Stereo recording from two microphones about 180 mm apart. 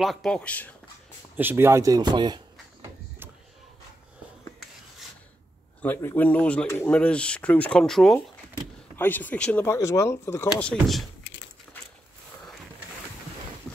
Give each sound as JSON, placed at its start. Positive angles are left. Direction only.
{"t": 0.0, "sound": "speech", "side_deg": 0}
{"t": 1.3, "sound": "speech", "side_deg": -10}
{"t": 5.8, "sound": "speech", "side_deg": 10}